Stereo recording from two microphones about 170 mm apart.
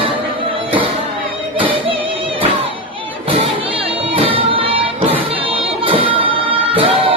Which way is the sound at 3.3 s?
35° right (ahead or behind).